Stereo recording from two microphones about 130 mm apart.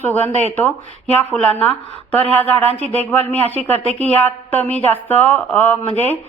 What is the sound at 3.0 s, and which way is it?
A woman's voice, 55° right (ahead or behind).